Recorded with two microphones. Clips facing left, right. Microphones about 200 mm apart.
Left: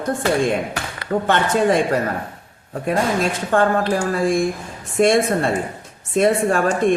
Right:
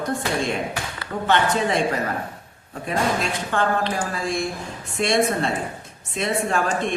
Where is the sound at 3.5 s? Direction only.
45° left (ahead or behind).